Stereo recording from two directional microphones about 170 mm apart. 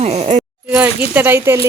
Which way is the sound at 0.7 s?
10° right (ahead or behind).